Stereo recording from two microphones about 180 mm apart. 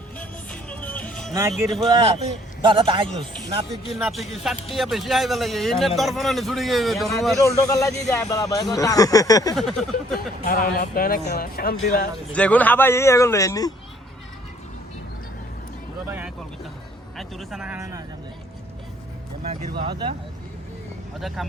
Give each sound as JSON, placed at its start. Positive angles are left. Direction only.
{"t": 0.2, "sound": "music", "side_deg": 5}
{"t": 1.3, "sound": "speech", "side_deg": -15}
{"t": 1.5, "sound": "speech", "side_deg": 0}
{"t": 2.1, "sound": "a man's voice", "side_deg": -30}
{"t": 4.0, "sound": "speech", "side_deg": 0}
{"t": 7.3, "sound": "a man's voice", "side_deg": 15}
{"t": 8.7, "sound": "a sound", "side_deg": 20}
{"t": 9.6, "sound": "speech", "side_deg": 0}
{"t": 10.4, "sound": "speech", "side_deg": 55}
{"t": 12.3, "sound": "a man's voice", "side_deg": 5}
{"t": 16.0, "sound": "vehicle", "side_deg": -10}
{"t": 17.2, "sound": "speech", "side_deg": 0}
{"t": 19.5, "sound": "a man's voice", "side_deg": -30}
{"t": 21.2, "sound": "speech", "side_deg": 0}